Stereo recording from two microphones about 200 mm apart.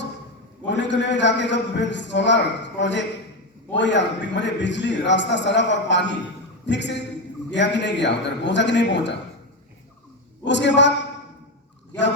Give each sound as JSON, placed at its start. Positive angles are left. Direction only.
{"t": 0.7, "sound": "a man's voice", "side_deg": 60}
{"t": 10.4, "sound": "a man's voice", "side_deg": 60}